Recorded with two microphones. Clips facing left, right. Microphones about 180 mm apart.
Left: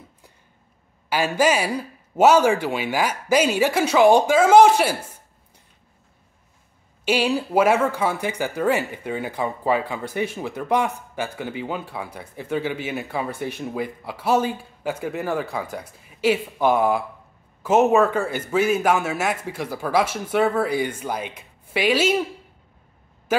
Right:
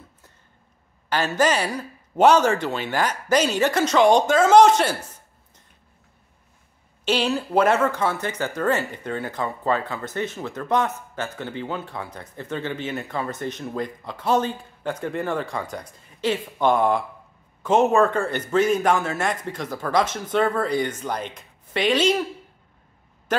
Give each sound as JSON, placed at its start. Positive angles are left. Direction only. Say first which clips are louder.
{"t": 1.1, "sound": "speech", "louder": "left 1 dB", "side_deg": 10}
{"t": 7.1, "sound": "speech", "louder": "left 1 dB", "side_deg": 10}